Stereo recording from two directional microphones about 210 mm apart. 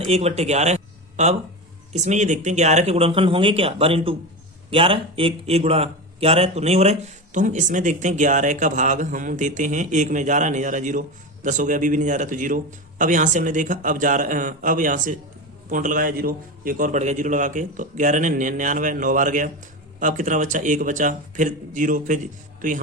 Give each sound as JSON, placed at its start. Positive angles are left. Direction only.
{"t": 0.0, "sound": "a man's voice", "side_deg": -30}